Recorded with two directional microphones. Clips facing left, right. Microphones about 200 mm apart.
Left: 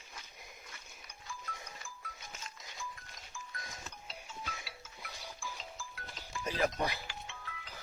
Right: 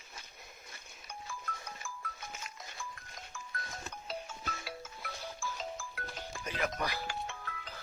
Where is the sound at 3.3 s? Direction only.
60° right (ahead or behind).